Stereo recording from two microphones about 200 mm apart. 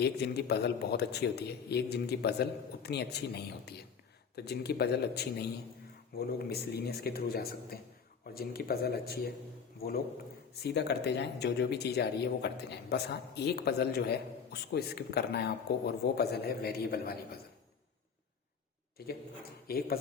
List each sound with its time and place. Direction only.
0.0 s a man's voice: 55° left (ahead or behind)
10.5 s a man's voice: 55° left (ahead or behind)
19.0 s a man's voice: 50° left (ahead or behind)